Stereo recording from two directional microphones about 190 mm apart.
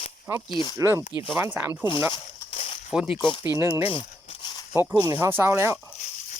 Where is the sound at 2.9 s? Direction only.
5° right (ahead or behind).